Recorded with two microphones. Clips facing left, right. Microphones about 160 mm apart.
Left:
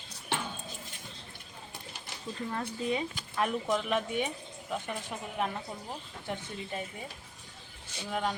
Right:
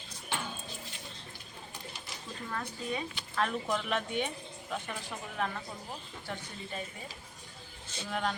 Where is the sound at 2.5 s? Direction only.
25° left (ahead or behind).